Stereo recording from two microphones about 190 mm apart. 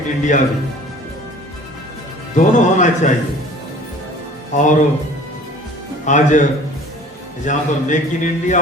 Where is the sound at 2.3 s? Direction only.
40° left (ahead or behind).